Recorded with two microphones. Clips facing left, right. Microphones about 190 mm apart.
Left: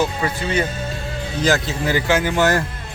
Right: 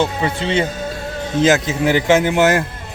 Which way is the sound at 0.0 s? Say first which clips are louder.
Right 2 dB; 25° right (ahead or behind).